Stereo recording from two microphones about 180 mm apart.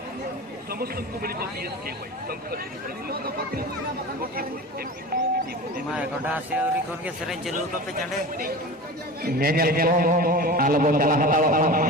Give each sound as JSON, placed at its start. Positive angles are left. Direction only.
{"t": 0.7, "sound": "speech", "side_deg": -55}
{"t": 5.9, "sound": "a man's voice", "side_deg": -10}
{"t": 9.2, "sound": "a man's voice", "side_deg": -55}